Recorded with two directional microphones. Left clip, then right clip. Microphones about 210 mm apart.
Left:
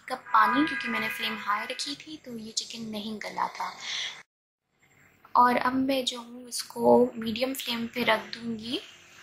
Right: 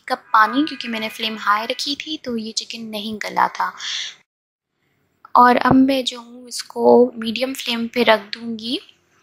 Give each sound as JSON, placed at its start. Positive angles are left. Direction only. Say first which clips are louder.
{"t": 0.0, "sound": "a woman's voice", "louder": "right 7 dB", "side_deg": -35}
{"t": 5.3, "sound": "a woman's voice", "louder": "right 10 dB", "side_deg": -35}